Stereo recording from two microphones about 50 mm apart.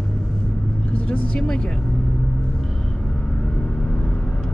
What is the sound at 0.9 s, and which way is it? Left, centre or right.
Vehicle, left.